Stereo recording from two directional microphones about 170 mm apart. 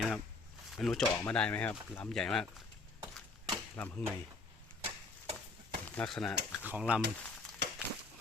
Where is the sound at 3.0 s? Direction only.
25° right (ahead or behind).